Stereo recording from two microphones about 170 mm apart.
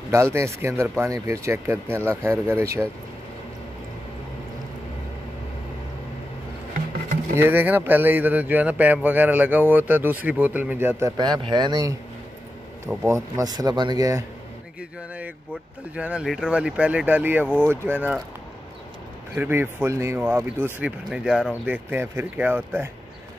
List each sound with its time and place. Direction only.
0.1 s speech: 15° right (ahead or behind)
7.3 s speech: 10° right (ahead or behind)
15.9 s speech: 5° right (ahead or behind)
19.3 s speech: 10° right (ahead or behind)